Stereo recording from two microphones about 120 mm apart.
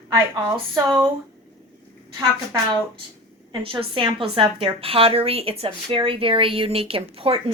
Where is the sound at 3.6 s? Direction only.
45° right (ahead or behind).